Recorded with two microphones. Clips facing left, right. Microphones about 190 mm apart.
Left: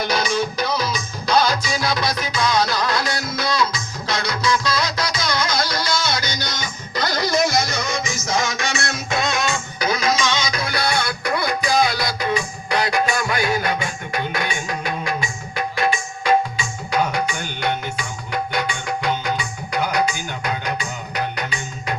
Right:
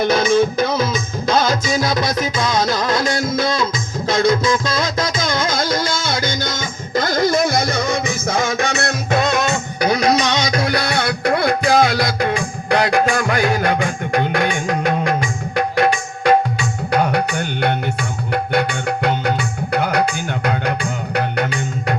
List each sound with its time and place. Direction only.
0.0 s music: 50° right (ahead or behind)